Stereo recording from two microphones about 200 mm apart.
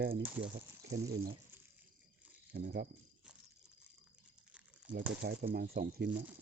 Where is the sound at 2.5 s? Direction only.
50° right (ahead or behind).